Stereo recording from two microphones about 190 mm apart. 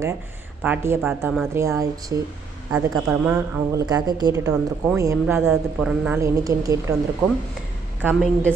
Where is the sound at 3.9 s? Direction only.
20° right (ahead or behind).